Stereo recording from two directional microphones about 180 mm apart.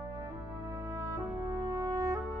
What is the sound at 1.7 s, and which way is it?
Music, 20° right (ahead or behind).